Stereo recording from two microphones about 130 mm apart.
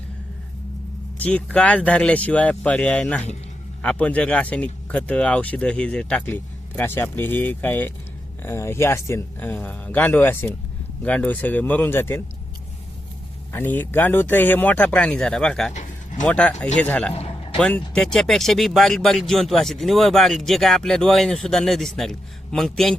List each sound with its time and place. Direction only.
1.2 s speech: 10° left (ahead or behind)
13.5 s speech: 15° left (ahead or behind)
15.7 s a sound: 65° left (ahead or behind)
16.2 s speech: 5° left (ahead or behind)
17.2 s a sound: 45° left (ahead or behind)
17.6 s speech: 10° left (ahead or behind)